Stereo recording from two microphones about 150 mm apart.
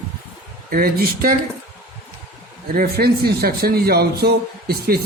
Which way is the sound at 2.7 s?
90° right.